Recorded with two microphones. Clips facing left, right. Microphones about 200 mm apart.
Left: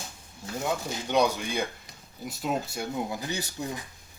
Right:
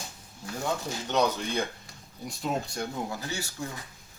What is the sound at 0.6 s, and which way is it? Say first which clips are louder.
Speech: left 1 dB; 10° left (ahead or behind).